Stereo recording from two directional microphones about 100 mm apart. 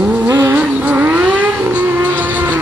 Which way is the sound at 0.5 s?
15° right (ahead or behind).